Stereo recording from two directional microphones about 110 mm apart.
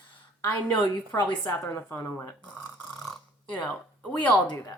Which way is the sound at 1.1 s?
15° left (ahead or behind).